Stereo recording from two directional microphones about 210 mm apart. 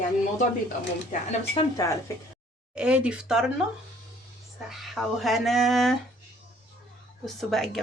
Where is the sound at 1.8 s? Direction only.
15° left (ahead or behind).